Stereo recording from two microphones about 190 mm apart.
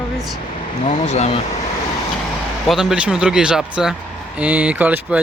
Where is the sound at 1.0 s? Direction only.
35° left (ahead or behind).